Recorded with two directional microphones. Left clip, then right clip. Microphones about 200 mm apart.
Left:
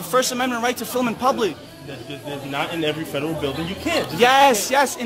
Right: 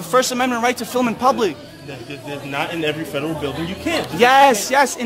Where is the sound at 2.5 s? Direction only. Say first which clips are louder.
Right 2 dB; 15° left (ahead or behind).